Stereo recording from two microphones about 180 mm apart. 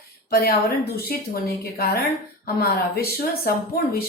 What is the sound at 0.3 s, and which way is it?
A woman's voice, 60° left (ahead or behind).